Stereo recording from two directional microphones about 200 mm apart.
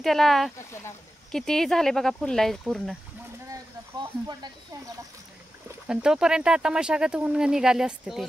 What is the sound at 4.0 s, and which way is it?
Speech, 20° right (ahead or behind).